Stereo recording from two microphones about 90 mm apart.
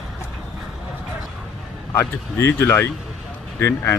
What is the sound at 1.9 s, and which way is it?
Speech, 30° left (ahead or behind).